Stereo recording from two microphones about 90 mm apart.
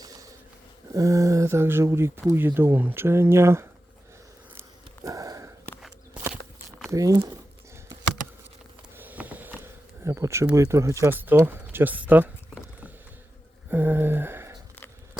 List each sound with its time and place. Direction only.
0.0 s a sound: 40° right (ahead or behind)
0.9 s speech: 40° right (ahead or behind)
5.0 s sniff: 40° right (ahead or behind)
6.3 s walk: 5° right (ahead or behind)
6.9 s speech: 40° right (ahead or behind)
9.0 s a sound: 20° right (ahead or behind)
10.0 s speech: 30° right (ahead or behind)
11.1 s speech: 20° right (ahead or behind)
13.7 s a sound: 20° right (ahead or behind)